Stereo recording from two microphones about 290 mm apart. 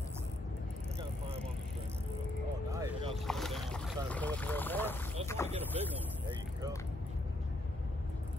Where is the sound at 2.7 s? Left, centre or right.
Centre.